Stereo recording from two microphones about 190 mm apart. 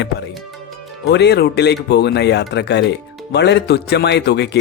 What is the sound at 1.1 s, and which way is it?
Speech, 60° left (ahead or behind).